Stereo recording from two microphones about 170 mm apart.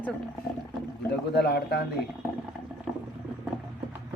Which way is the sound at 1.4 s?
75° left (ahead or behind).